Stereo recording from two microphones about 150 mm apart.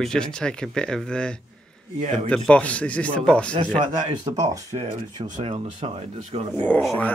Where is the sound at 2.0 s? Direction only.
50° right (ahead or behind).